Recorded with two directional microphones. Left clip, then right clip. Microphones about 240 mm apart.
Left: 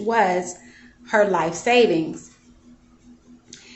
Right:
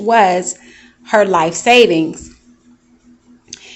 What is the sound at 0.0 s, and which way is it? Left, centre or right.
Speech, right.